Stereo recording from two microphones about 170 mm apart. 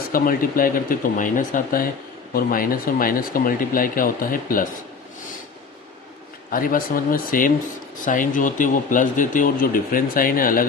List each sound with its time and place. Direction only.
0.1 s speech: 55° left (ahead or behind)
6.5 s speech: 55° left (ahead or behind)